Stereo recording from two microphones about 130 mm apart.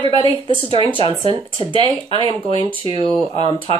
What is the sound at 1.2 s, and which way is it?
Speech, 40° right (ahead or behind).